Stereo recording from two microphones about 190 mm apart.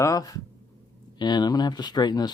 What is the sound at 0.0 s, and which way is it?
Speech, 20° left (ahead or behind).